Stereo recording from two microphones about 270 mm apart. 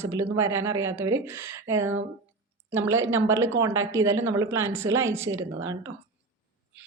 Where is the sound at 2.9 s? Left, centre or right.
Centre.